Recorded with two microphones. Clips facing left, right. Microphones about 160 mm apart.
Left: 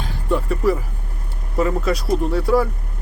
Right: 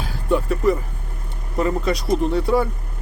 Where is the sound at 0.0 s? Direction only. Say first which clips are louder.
Right 1 dB; centre (ahead or behind).